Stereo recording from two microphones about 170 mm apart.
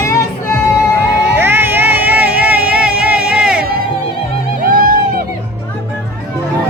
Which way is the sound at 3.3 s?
5° right (ahead or behind).